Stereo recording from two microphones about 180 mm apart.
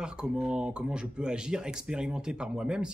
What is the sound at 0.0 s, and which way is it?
Speech, 5° right (ahead or behind).